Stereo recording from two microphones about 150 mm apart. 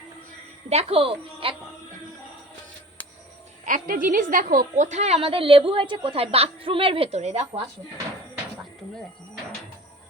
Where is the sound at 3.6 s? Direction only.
65° right (ahead or behind); by 7.6 s 45° right (ahead or behind).